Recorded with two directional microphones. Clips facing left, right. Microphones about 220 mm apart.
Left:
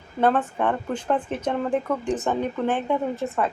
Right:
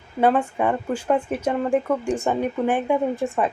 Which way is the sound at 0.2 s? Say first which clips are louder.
Right 2 dB; 10° right (ahead or behind).